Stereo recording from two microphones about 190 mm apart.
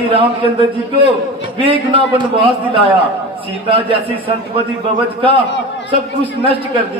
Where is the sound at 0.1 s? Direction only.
25° right (ahead or behind).